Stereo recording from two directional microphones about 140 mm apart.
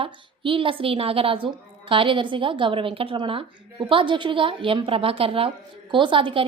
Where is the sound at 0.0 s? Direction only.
40° right (ahead or behind).